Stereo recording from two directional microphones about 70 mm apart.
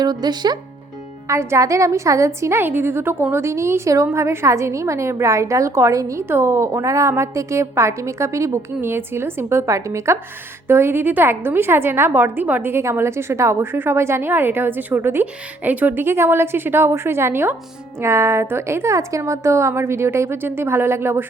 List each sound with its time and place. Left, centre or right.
0.0 s speech: right
1.3 s a woman's voice: right
10.7 s a woman's voice: right
12.7 s a woman's voice: right